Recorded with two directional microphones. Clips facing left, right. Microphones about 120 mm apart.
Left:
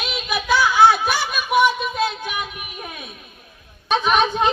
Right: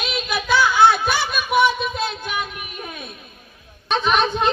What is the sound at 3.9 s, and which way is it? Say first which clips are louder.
Speech: left 1 dB; 10° left (ahead or behind).